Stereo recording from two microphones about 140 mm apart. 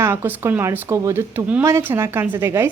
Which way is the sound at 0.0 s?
15° right (ahead or behind).